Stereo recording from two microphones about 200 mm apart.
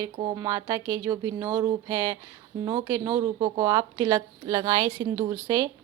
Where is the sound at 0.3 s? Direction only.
15° right (ahead or behind).